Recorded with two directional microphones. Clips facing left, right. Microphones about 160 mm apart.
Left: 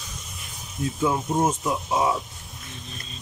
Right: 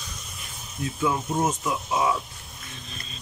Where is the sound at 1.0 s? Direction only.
20° left (ahead or behind).